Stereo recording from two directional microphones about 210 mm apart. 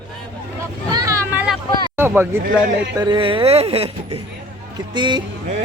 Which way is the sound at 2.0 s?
10° right (ahead or behind).